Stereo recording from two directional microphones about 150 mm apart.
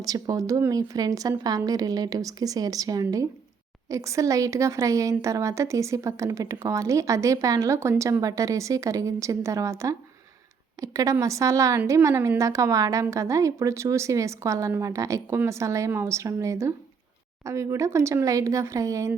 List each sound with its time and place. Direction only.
0.0 s a woman's voice: 25° right (ahead or behind)